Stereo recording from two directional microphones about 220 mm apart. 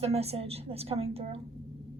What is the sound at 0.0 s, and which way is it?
A woman's voice, 30° right (ahead or behind).